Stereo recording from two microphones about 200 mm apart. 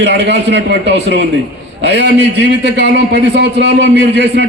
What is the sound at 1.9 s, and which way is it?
Speech, 60° right (ahead or behind).